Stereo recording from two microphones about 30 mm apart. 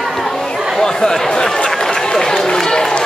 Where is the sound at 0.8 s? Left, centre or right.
Centre.